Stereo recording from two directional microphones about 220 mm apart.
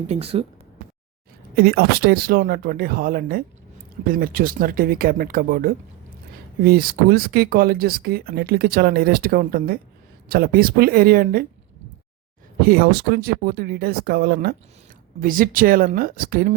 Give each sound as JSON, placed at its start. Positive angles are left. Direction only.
{"t": 0.1, "sound": "speech", "side_deg": -25}
{"t": 1.5, "sound": "speech", "side_deg": -45}
{"t": 12.6, "sound": "speech", "side_deg": -45}